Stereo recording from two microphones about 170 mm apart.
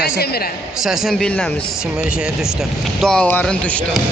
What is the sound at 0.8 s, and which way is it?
Speech, centre (ahead or behind).